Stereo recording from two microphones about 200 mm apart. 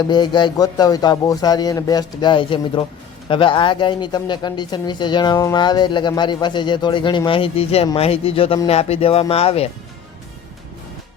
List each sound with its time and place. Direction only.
0.0 s speech: 20° left (ahead or behind)